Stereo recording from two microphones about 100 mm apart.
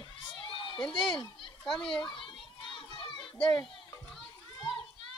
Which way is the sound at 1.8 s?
55° left (ahead or behind).